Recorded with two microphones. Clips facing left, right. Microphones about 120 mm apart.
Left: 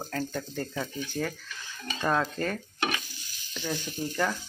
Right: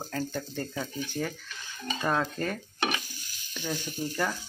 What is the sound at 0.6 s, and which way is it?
Speech, 15° right (ahead or behind).